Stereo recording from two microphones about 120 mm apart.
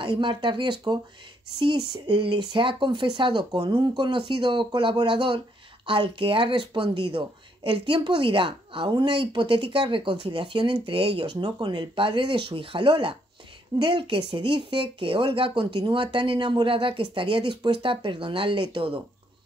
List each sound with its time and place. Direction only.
0.0 s speech: 40° right (ahead or behind)